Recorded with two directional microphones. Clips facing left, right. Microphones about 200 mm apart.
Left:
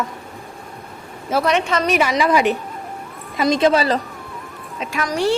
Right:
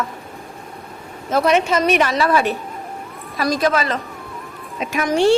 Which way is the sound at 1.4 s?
5° right (ahead or behind).